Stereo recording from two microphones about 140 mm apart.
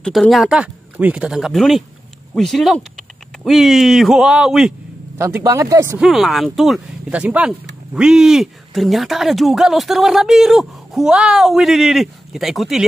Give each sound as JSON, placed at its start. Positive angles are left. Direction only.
{"t": 0.0, "sound": "speech", "side_deg": 0}
{"t": 5.1, "sound": "speech", "side_deg": -20}
{"t": 5.9, "sound": "speech", "side_deg": 0}